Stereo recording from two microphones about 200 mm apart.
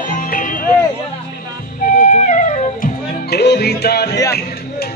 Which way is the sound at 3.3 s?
55° left (ahead or behind).